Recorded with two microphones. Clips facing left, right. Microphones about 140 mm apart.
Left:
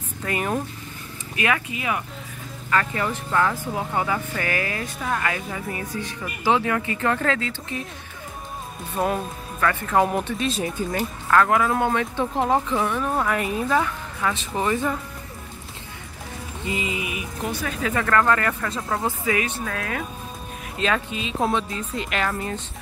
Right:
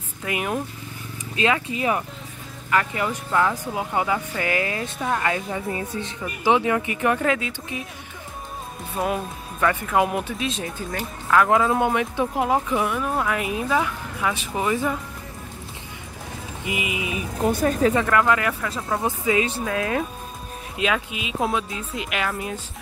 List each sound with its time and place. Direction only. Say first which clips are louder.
0.2 s speech: left 1 dB; 5° right (ahead or behind)
1.3 s speech: right 2 dB; 25° right (ahead or behind)
2.7 s speech: right 1 dB; 15° right (ahead or behind)
8.9 s speech: left 1 dB; 5° right (ahead or behind)
9.6 s speech: even; 15° right (ahead or behind); by 11.3 s 5° left (ahead or behind)
11.3 s speech: right 1 dB; 20° right (ahead or behind)
16.6 s speech: even; 15° right (ahead or behind)
17.5 s speech: right 9 dB; 45° right (ahead or behind)
17.9 s speech: right 1 dB; 15° right (ahead or behind)
19.0 s speech: right 4 dB; 20° right (ahead or behind); by 22.6 s 5° right (ahead or behind)